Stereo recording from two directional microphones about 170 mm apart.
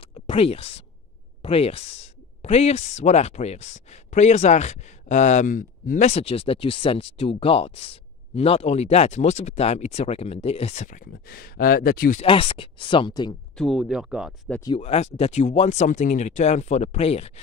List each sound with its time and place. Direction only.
0.1 s a sound: 35° left (ahead or behind)
1.4 s speech: 35° left (ahead or behind); by 12.2 s 60° left (ahead or behind)
12.2 s speech: 35° left (ahead or behind)
13.6 s speech: centre (ahead or behind)
14.8 s speech: 40° left (ahead or behind)